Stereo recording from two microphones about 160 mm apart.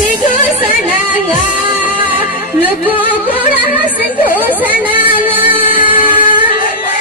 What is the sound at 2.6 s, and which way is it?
Music, 10° right (ahead or behind).